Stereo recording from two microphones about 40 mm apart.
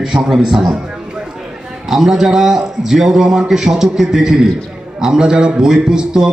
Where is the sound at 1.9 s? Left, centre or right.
Centre.